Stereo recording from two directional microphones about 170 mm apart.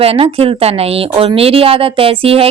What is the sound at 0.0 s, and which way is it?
Speech, 35° right (ahead or behind).